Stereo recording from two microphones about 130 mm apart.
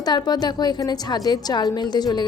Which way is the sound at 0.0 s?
30° left (ahead or behind).